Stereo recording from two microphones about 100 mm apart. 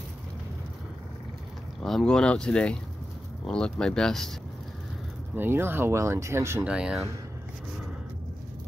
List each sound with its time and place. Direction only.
1.8 s speech: 5° left (ahead or behind)
5.3 s speech: 20° right (ahead or behind)
6.6 s speech: 10° right (ahead or behind)